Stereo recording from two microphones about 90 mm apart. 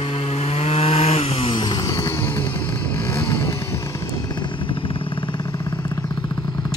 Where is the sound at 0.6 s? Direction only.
90° left.